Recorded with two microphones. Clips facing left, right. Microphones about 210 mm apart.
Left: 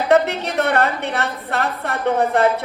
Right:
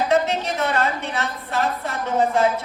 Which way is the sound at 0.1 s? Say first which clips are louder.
Left 4 dB; 60° left (ahead or behind).